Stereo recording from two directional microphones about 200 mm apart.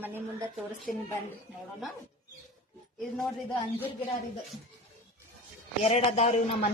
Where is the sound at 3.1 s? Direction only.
10° left (ahead or behind).